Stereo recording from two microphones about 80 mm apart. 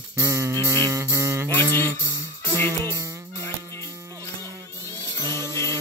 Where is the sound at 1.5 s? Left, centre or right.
Left.